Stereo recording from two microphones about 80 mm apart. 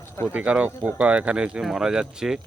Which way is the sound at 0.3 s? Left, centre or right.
Centre.